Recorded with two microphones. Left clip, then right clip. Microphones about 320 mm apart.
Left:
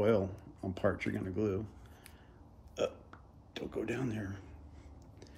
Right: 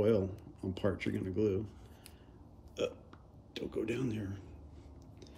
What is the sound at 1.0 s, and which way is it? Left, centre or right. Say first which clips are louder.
Speech: right 1 dB; centre.